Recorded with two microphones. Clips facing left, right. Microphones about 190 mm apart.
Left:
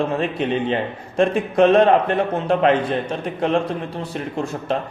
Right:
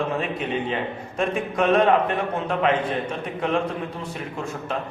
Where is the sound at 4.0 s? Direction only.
35° left (ahead or behind).